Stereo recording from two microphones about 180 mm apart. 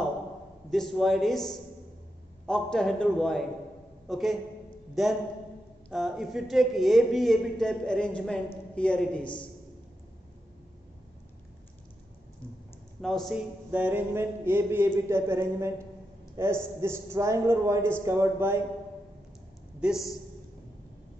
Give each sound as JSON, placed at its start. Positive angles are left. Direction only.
{"t": 0.7, "sound": "a man's voice", "side_deg": 0}
{"t": 9.2, "sound": "a man's voice", "side_deg": 25}
{"t": 13.0, "sound": "a man's voice", "side_deg": 0}
{"t": 13.7, "sound": "a man's voice", "side_deg": -10}
{"t": 19.8, "sound": "a man's voice", "side_deg": 0}